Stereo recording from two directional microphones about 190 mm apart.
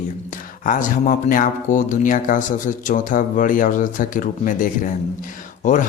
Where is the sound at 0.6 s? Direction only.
45° left (ahead or behind).